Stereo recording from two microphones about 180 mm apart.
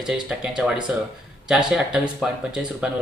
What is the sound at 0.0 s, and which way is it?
Speech, 5° right (ahead or behind).